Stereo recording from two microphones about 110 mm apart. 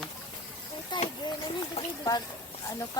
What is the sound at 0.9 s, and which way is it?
Speech, 45° left (ahead or behind).